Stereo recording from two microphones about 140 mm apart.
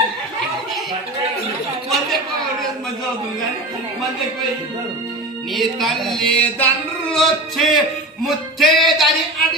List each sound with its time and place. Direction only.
5.5 s speech: centre (ahead or behind)